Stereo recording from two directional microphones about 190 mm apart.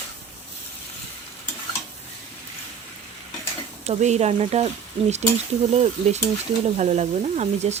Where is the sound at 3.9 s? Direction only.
35° right (ahead or behind).